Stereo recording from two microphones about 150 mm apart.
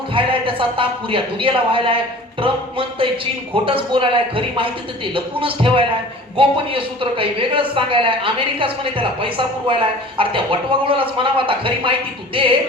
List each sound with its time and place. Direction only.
0.1 s speech: 35° right (ahead or behind)